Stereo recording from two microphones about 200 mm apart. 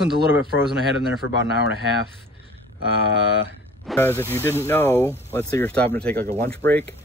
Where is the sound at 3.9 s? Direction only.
10° left (ahead or behind).